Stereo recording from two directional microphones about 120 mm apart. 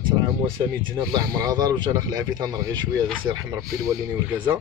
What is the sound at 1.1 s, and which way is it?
Speech, 30° right (ahead or behind).